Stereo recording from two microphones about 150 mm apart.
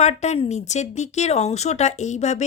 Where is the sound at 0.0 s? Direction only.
50° left (ahead or behind).